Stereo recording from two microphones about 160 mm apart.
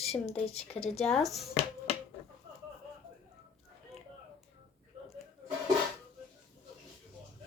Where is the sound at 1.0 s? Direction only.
Centre (ahead or behind).